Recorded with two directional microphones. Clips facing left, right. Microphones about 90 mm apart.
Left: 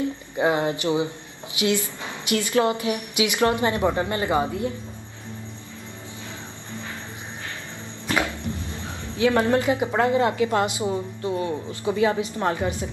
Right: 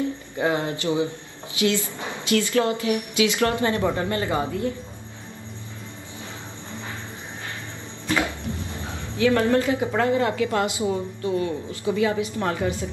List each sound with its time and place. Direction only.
0.4 s a woman's voice: 20° left (ahead or behind)
9.2 s a woman's voice: 25° left (ahead or behind)